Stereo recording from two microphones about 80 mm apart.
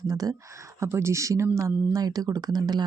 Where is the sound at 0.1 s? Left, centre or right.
Right.